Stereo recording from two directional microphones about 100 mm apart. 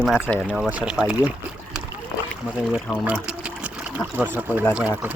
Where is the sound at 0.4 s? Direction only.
10° right (ahead or behind).